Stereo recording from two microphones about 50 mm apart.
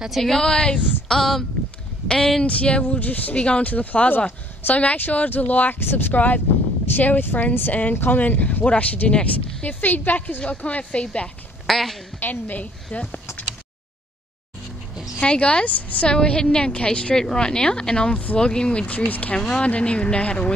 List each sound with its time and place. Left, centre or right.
0.2 s speech: centre
2.4 s a woman's voice: left
5.8 s speech: left
8.2 s a woman's voice: left
11.6 s speech: centre
12.2 s speech: left
15.1 s a woman's voice: left
19.3 s a woman's voice: centre